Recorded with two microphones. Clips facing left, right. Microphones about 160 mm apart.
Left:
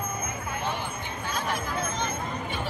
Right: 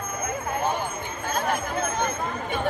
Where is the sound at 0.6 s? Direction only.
45° right (ahead or behind).